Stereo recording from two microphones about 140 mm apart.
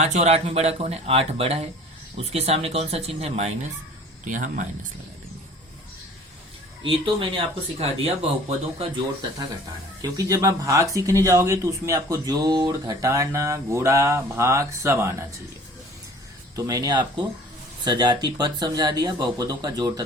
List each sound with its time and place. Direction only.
0.0 s speech: 55° right (ahead or behind)
4.3 s speech: 65° right (ahead or behind)
6.8 s speech: 40° right (ahead or behind)
10.0 s speech: 25° right (ahead or behind)
16.6 s speech: 25° right (ahead or behind)